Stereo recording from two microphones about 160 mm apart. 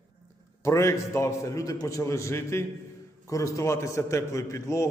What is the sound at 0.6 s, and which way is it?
A man's voice, 20° left (ahead or behind).